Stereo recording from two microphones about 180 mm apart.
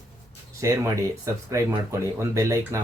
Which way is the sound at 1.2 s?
20° right (ahead or behind).